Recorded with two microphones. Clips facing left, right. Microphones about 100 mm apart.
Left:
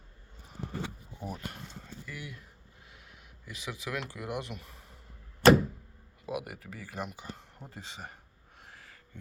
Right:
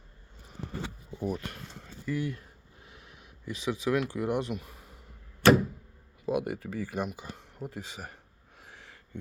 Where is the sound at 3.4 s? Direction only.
20° right (ahead or behind).